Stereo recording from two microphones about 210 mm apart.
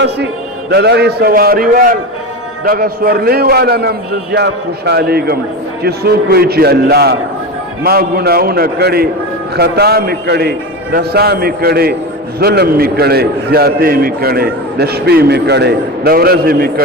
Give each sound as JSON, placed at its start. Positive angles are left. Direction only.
{"t": 0.7, "sound": "a man's voice", "side_deg": -55}